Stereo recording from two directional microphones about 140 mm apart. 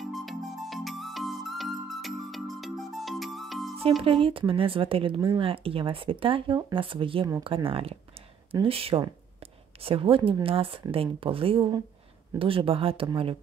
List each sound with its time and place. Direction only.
0.0 s music: centre (ahead or behind)
4.0 s speech: 40° right (ahead or behind)